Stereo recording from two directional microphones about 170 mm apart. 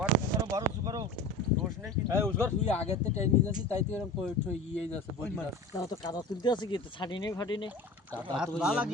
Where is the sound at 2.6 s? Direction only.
40° left (ahead or behind).